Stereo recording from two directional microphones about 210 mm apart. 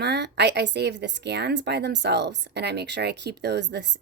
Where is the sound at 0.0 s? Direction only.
55° right (ahead or behind).